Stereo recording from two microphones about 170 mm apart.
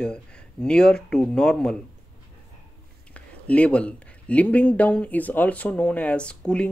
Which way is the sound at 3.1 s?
10° left (ahead or behind).